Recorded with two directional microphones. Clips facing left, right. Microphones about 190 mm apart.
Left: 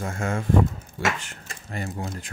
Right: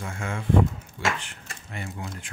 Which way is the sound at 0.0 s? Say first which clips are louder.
Left 5 dB; 45° left (ahead or behind).